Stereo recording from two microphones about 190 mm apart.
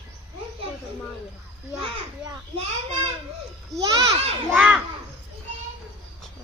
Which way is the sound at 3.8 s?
20° right (ahead or behind).